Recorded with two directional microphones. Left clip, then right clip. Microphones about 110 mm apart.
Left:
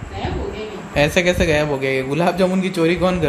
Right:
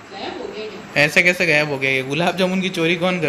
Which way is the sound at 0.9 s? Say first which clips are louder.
Right 2 dB; centre (ahead or behind).